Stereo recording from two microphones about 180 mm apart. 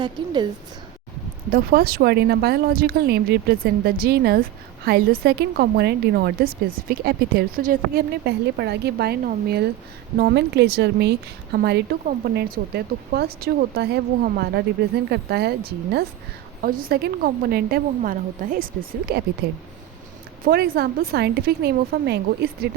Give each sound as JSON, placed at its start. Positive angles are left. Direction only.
{"t": 1.5, "sound": "a woman's voice", "side_deg": -55}
{"t": 16.6, "sound": "a woman's voice", "side_deg": -55}
{"t": 20.4, "sound": "a woman's voice", "side_deg": -55}